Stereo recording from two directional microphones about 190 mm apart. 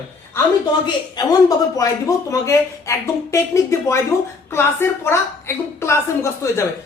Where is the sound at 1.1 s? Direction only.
20° left (ahead or behind).